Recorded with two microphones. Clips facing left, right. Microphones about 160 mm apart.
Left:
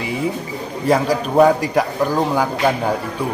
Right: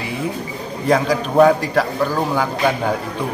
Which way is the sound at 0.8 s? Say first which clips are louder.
Even; 5° left (ahead or behind).